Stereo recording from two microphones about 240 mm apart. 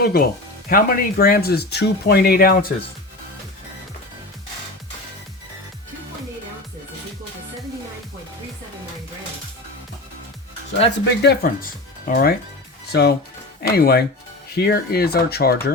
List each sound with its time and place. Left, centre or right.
0.0 s speech: left
11.2 s speech: left